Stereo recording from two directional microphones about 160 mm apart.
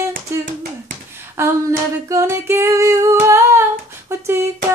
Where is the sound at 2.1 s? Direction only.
15° right (ahead or behind).